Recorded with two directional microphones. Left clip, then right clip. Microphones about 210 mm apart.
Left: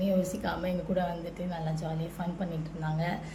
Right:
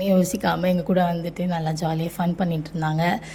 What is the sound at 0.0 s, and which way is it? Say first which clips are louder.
A woman's voice: right 9 dB; 45° right (ahead or behind).